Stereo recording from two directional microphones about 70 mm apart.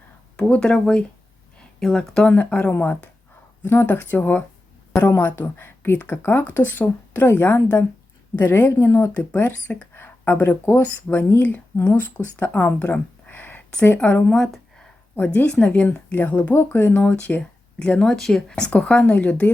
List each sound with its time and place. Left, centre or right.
0.4 s a woman's voice: centre
8.8 s speech: left
9.1 s speech: left
14.3 s speech: centre
15.1 s speech: left
17.0 s speech: centre